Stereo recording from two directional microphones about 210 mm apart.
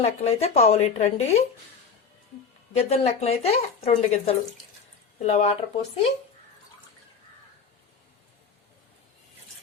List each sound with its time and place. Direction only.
0.0 s speech: 30° left (ahead or behind)
2.7 s speech: 30° left (ahead or behind)